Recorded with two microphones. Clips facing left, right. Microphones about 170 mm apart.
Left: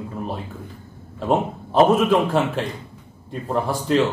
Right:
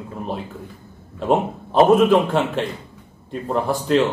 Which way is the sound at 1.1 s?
Centre (ahead or behind).